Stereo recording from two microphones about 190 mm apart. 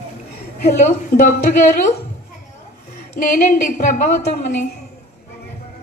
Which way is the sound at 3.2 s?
45° left (ahead or behind).